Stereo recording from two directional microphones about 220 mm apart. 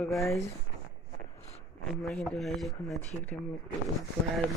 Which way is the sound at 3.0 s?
30° left (ahead or behind).